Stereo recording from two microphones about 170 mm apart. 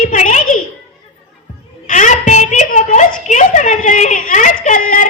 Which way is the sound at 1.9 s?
45° left (ahead or behind).